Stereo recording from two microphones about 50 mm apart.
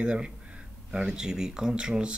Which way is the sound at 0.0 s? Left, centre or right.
Right.